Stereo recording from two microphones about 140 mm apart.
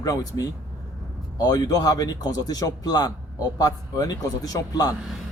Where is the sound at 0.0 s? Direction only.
25° left (ahead or behind).